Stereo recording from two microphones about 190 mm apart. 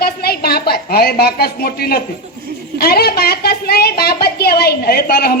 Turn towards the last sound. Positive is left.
turn(degrees=55)  # may be behind; listen again after turning